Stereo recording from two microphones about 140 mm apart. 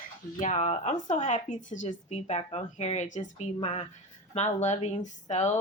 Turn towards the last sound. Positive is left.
turn(degrees=55)  # may be behind; listen again after turning